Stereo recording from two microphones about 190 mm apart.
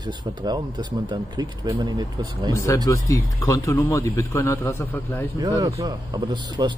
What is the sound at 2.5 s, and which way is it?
Speech, 15° left (ahead or behind).